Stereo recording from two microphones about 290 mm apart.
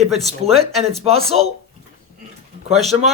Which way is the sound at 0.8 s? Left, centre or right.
Right.